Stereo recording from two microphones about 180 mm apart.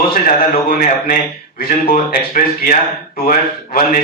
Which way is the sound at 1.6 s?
55° left (ahead or behind).